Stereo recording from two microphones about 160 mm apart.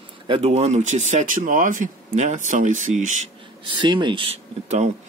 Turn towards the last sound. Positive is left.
turn(degrees=-40)  # may be behind; listen again after turning